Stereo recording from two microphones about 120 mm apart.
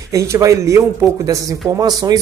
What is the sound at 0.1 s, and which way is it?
Speech, 25° right (ahead or behind).